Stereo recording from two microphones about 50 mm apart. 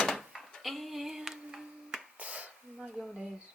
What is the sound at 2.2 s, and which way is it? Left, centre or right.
Finger snapping, right.